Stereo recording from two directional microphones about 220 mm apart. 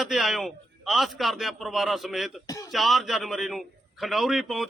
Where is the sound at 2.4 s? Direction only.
15° left (ahead or behind).